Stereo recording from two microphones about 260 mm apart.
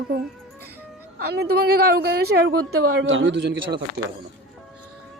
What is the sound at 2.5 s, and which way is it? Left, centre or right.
A man's voice, right.